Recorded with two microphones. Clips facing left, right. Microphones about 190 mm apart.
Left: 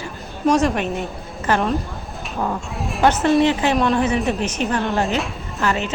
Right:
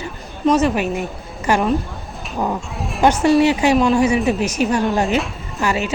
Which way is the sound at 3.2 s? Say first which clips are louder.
Right 4 dB; 10° right (ahead or behind).